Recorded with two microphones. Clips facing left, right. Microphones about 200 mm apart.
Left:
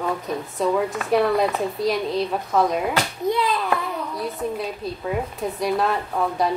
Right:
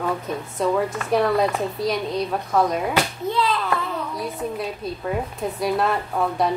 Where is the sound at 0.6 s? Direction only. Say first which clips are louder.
Even; centre (ahead or behind).